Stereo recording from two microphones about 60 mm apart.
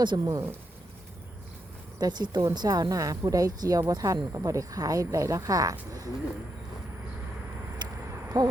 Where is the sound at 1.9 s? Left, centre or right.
Right.